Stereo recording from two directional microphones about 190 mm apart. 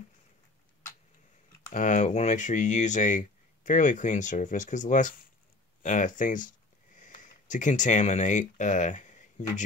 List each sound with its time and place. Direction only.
1.6 s speech: 40° left (ahead or behind)